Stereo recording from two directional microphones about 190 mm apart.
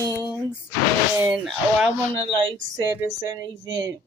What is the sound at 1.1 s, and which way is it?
Speech, 5° right (ahead or behind).